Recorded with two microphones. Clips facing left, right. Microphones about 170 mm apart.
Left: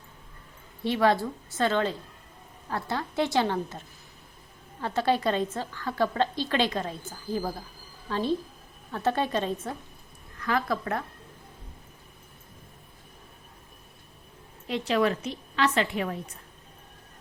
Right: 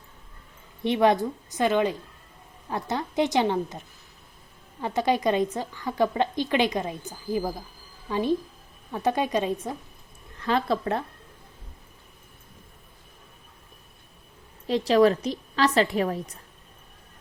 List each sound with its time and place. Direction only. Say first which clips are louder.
0.9 s a woman's voice: right 3 dB; 20° right (ahead or behind)
10.3 s a woman's voice: right 3 dB; 30° right (ahead or behind)
14.7 s a woman's voice: right 6 dB; 35° right (ahead or behind)